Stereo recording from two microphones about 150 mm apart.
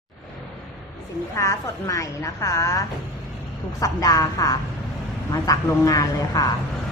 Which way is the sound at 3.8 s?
25° left (ahead or behind).